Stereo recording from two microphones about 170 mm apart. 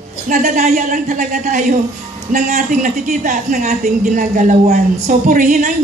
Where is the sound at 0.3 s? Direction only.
50° right (ahead or behind).